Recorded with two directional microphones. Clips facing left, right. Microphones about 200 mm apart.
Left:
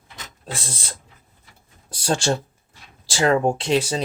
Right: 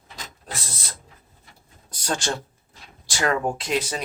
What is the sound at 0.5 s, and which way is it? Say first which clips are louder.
Speech: left 4 dB; 30° left (ahead or behind).